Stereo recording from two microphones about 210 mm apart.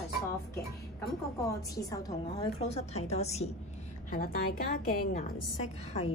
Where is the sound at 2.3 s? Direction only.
30° left (ahead or behind).